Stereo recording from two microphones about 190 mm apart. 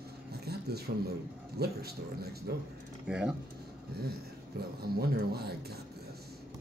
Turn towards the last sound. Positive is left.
turn(degrees=-55)  # may be behind; listen again after turning